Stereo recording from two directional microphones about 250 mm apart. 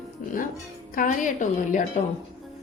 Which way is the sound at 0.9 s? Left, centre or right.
Left.